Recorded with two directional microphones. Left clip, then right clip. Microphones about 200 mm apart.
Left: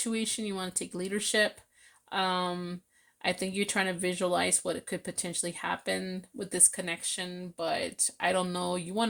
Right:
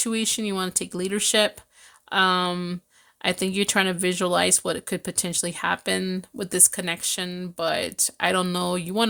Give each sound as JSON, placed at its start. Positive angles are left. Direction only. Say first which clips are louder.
{"t": 0.0, "sound": "speech", "louder": "right 7 dB", "side_deg": -35}